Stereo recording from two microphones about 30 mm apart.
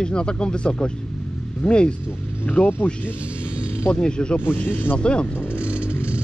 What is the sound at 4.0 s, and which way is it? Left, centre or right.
Speech, left.